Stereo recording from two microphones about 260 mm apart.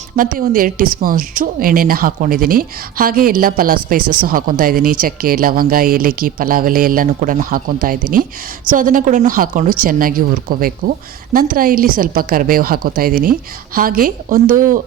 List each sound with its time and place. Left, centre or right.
0.2 s speech: right